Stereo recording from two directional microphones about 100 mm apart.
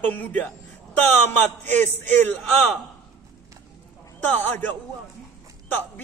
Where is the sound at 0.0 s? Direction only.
15° left (ahead or behind).